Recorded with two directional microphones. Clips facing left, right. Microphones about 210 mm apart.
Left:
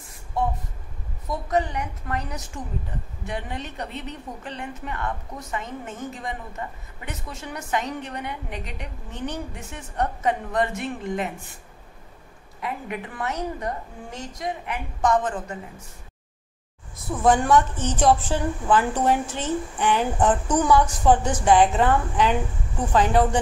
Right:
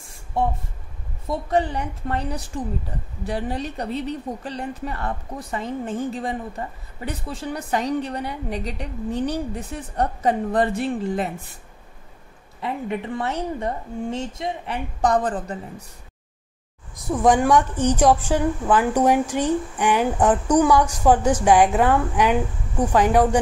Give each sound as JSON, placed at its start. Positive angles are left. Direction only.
{"t": 1.2, "sound": "a woman's voice", "side_deg": -30}
{"t": 12.6, "sound": "a woman's voice", "side_deg": -30}
{"t": 16.9, "sound": "a woman's voice", "side_deg": -15}